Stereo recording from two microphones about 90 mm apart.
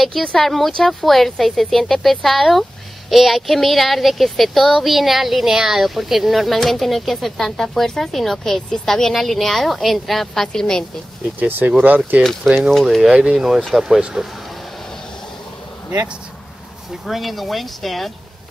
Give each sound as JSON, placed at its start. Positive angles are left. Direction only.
{"t": 0.0, "sound": "speech", "side_deg": 5}
{"t": 11.3, "sound": "speech", "side_deg": -20}
{"t": 12.7, "sound": "speech", "side_deg": 0}
{"t": 13.8, "sound": "speech", "side_deg": -5}
{"t": 17.0, "sound": "speech", "side_deg": 0}